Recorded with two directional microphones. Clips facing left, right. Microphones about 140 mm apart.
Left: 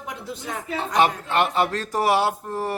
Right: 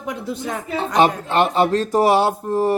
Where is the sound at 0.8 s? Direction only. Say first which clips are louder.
Right 4 dB; 25° right (ahead or behind).